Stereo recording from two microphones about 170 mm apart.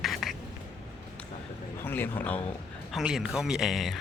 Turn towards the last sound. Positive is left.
turn(degrees=0)  # may be behind; listen again after turning